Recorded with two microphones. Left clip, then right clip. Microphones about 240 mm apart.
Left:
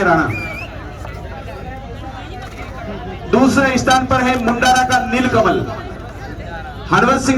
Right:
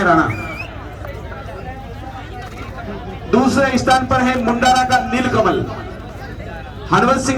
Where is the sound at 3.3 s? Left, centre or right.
Left.